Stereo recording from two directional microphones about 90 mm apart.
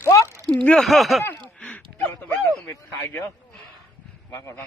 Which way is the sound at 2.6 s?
30° left (ahead or behind).